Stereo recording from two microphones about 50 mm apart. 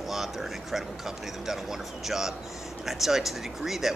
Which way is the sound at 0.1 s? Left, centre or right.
Centre.